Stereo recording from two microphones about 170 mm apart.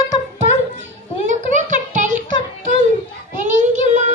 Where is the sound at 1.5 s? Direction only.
45° right (ahead or behind).